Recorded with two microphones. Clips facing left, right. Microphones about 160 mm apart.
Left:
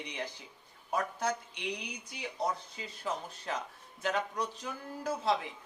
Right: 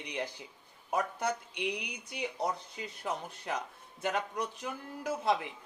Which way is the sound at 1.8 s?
65° right (ahead or behind).